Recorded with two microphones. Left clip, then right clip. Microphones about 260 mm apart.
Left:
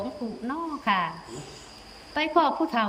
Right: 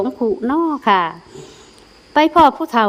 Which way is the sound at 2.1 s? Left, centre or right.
Centre.